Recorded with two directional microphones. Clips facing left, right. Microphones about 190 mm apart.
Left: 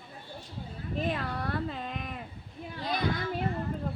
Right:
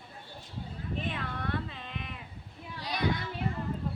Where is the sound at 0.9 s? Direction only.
40° left (ahead or behind).